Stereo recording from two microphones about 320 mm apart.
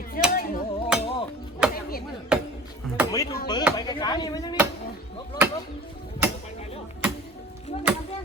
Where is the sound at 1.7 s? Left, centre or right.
Left.